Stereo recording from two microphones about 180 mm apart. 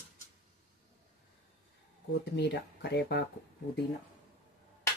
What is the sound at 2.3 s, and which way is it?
Speech, 65° left (ahead or behind).